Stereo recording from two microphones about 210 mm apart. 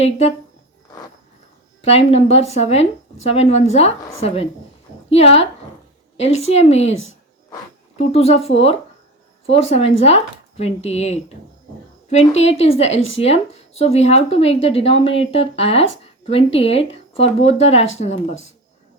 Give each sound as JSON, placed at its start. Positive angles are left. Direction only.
{"t": 0.0, "sound": "speech", "side_deg": 30}
{"t": 1.8, "sound": "speech", "side_deg": 30}
{"t": 5.0, "sound": "speech", "side_deg": 30}
{"t": 9.6, "sound": "speech", "side_deg": 30}